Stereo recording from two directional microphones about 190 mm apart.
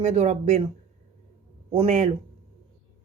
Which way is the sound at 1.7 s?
35° right (ahead or behind).